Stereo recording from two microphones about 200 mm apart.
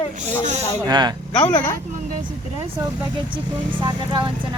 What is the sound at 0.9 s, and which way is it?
Speech, 20° right (ahead or behind).